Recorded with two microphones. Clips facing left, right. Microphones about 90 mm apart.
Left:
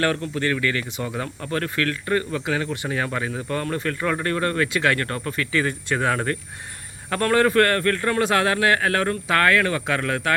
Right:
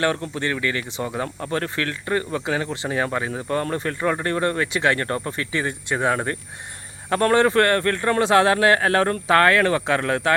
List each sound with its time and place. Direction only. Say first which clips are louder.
0.0 s speech: even; 25° right (ahead or behind)